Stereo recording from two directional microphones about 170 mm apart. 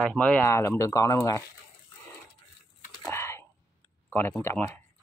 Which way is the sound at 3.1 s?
15° left (ahead or behind).